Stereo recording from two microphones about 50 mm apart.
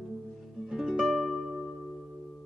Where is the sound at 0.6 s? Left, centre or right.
Centre.